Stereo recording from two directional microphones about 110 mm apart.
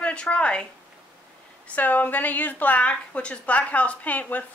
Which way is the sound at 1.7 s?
15° left (ahead or behind).